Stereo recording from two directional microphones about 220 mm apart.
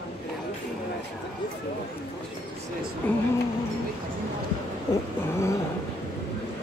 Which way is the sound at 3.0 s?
5° left (ahead or behind).